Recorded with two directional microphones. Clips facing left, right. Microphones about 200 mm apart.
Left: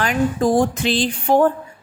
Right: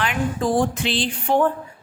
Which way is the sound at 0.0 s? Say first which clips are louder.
Left 5 dB; 45° left (ahead or behind).